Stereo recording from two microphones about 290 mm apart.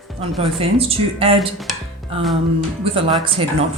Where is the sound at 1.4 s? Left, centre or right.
Centre.